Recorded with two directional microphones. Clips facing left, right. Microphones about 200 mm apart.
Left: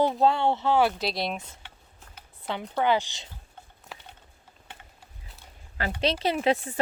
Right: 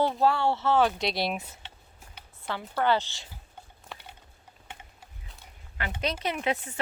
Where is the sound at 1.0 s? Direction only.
Centre (ahead or behind).